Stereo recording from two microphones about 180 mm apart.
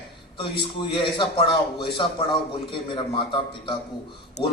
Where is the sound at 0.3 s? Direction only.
30° left (ahead or behind).